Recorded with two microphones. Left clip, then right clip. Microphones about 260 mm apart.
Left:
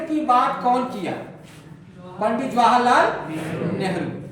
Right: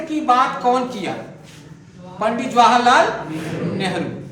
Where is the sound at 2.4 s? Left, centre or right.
Centre.